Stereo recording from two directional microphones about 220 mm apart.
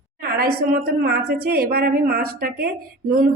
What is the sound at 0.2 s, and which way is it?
A woman's voice, 45° right (ahead or behind).